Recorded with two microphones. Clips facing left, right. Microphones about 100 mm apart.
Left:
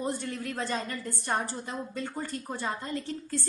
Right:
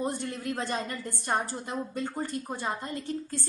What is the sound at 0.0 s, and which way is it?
A woman's voice, 20° right (ahead or behind).